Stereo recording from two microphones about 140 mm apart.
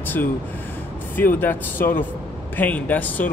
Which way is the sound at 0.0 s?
15° left (ahead or behind).